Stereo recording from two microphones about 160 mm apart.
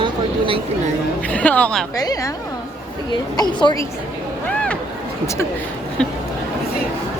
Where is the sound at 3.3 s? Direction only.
25° left (ahead or behind).